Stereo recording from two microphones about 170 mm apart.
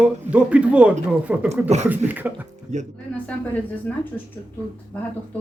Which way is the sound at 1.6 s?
40° right (ahead or behind).